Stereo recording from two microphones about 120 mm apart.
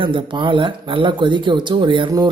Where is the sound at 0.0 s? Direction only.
45° right (ahead or behind).